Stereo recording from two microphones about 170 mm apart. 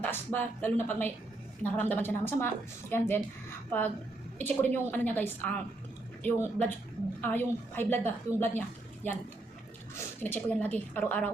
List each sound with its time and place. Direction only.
0.0 s a woman's voice: 10° left (ahead or behind)
9.9 s a woman's voice: 10° left (ahead or behind)